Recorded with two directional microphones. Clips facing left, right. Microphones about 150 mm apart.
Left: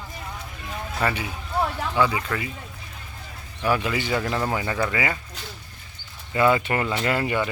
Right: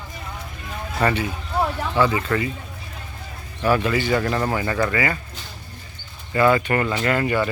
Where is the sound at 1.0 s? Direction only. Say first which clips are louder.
Right 5 dB; 5° left (ahead or behind).